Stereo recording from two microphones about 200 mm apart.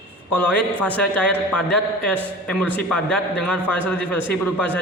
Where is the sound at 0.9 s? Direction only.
5° left (ahead or behind).